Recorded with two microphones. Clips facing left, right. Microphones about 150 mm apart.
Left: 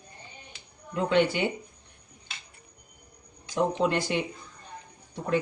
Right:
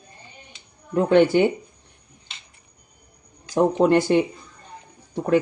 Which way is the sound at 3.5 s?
45° right (ahead or behind).